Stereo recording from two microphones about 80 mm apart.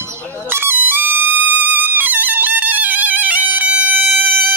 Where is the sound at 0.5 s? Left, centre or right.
Right.